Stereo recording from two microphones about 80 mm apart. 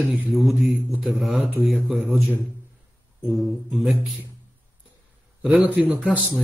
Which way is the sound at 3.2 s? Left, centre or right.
Centre.